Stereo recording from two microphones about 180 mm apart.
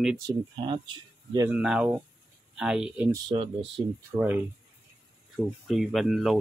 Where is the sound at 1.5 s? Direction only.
5° right (ahead or behind).